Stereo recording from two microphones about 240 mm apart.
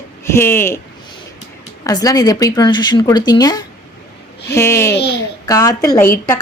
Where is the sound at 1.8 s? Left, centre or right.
Centre.